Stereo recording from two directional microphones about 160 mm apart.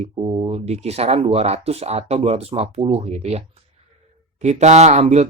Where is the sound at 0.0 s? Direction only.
35° right (ahead or behind).